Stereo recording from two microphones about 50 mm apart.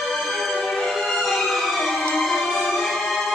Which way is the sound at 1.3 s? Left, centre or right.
Centre.